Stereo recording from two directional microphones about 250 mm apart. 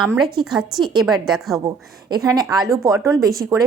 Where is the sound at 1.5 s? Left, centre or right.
Centre.